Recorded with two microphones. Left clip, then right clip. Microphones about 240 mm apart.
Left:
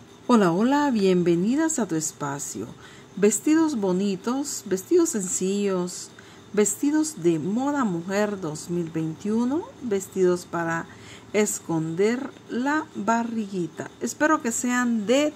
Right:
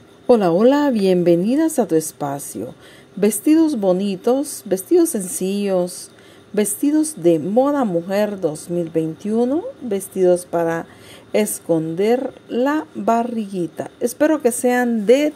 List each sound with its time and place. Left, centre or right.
0.3 s a woman's voice: centre